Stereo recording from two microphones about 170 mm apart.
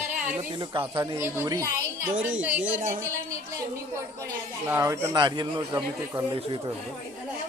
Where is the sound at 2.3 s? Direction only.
10° right (ahead or behind).